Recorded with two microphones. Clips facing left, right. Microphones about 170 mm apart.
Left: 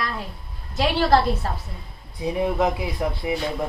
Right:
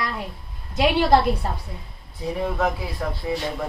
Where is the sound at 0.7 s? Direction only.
20° right (ahead or behind).